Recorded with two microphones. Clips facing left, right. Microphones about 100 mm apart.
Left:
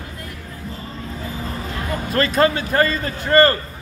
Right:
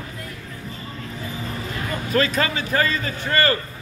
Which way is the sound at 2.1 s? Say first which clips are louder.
Left 4 dB; 45° left (ahead or behind).